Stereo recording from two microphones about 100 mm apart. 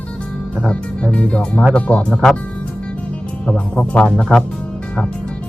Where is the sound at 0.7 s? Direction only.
10° left (ahead or behind).